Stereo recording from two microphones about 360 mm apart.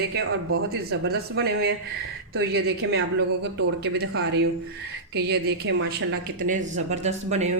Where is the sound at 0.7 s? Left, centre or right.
Right.